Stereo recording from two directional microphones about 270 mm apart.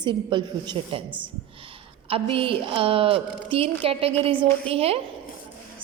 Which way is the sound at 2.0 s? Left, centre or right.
Centre.